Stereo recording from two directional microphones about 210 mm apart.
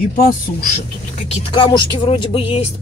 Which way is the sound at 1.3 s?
20° left (ahead or behind).